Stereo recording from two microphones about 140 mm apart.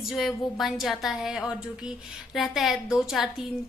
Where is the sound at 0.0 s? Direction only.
Centre (ahead or behind).